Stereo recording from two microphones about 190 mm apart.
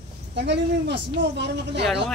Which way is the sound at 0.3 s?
65° right (ahead or behind).